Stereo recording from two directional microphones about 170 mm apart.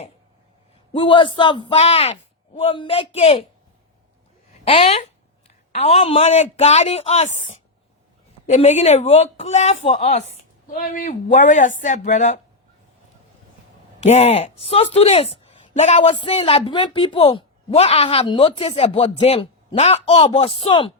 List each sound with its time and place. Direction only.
0.9 s a man's voice: 30° left (ahead or behind)
4.6 s speech: 35° left (ahead or behind)
10.7 s speech: 55° left (ahead or behind)
14.0 s speech: 40° left (ahead or behind)